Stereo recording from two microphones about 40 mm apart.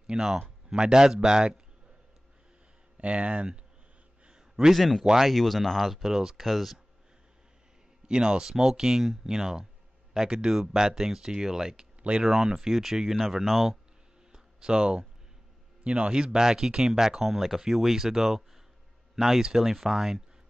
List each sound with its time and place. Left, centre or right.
0.0 s a man's voice: centre
3.0 s speech: right
4.3 s a sound: centre
4.7 s speech: centre
5.0 s speech: centre
5.3 s speech: centre
6.0 s speech: centre
6.4 s speech: centre
8.1 s speech: centre
14.3 s a sound: centre
15.8 s speech: right; by 20.2 s centre